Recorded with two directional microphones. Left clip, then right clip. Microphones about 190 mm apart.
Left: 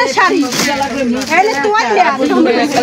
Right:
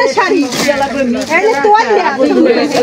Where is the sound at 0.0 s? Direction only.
15° left (ahead or behind).